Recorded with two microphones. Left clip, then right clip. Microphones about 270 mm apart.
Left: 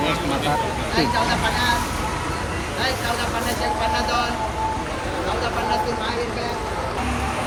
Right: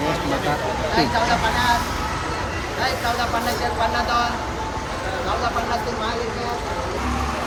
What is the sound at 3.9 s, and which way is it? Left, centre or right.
Speech, centre.